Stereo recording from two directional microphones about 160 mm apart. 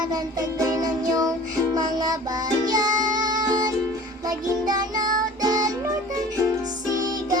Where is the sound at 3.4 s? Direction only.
25° right (ahead or behind).